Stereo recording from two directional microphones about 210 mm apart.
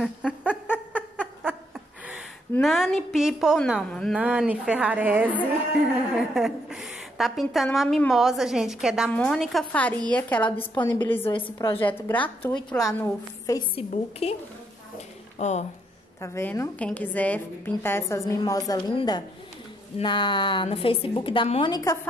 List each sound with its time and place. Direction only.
0.0 s a sound: 5° right (ahead or behind)
2.5 s a woman's voice: centre (ahead or behind)
10.5 s a woman's voice: 20° left (ahead or behind)
11.0 s a woman's voice: 10° left (ahead or behind)
11.3 s a woman's voice: 25° left (ahead or behind)
11.8 s a woman's voice: 10° left (ahead or behind)
13.8 s a woman's voice: 30° left (ahead or behind)
16.2 s a woman's voice: 10° left (ahead or behind)